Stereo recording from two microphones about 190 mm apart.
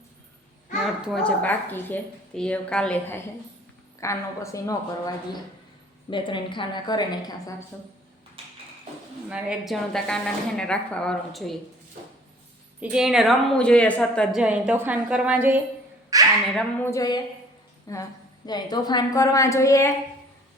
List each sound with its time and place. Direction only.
1.0 s a woman's voice: 5° left (ahead or behind)
4.0 s a woman's voice: 15° left (ahead or behind)
9.3 s a woman's voice: 5° right (ahead or behind)
12.8 s a woman's voice: 5° right (ahead or behind)
14.4 s a woman's voice: 5° right (ahead or behind)
16.6 s a woman's voice: 15° left (ahead or behind)